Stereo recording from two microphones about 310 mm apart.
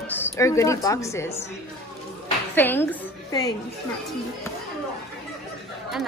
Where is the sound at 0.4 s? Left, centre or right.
Centre.